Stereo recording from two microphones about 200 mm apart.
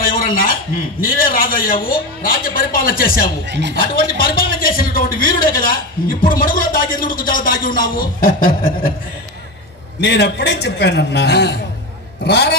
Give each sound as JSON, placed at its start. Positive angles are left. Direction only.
{"t": 0.0, "sound": "a sound", "side_deg": 45}
{"t": 1.0, "sound": "a man's voice", "side_deg": 45}
{"t": 3.4, "sound": "a woman's voice", "side_deg": -60}
{"t": 3.8, "sound": "a man's voice", "side_deg": 45}
{"t": 9.9, "sound": "a man's voice", "side_deg": 55}